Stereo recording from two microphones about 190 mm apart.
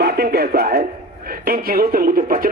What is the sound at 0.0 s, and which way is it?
Speech, 55° right (ahead or behind).